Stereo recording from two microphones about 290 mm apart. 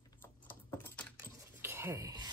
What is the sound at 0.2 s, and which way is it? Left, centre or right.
Typing, centre.